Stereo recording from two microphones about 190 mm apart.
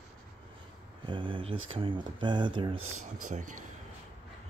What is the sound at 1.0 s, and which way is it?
Speech, 25° right (ahead or behind).